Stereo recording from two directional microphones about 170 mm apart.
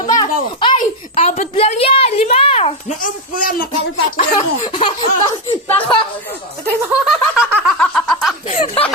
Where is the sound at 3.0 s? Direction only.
50° left (ahead or behind).